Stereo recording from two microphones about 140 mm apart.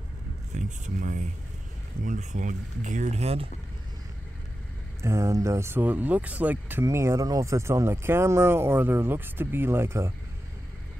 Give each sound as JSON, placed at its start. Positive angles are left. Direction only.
{"t": 0.6, "sound": "speech", "side_deg": -60}
{"t": 5.0, "sound": "speech", "side_deg": -20}